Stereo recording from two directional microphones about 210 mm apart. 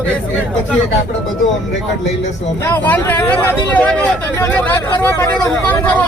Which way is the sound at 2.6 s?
10° left (ahead or behind).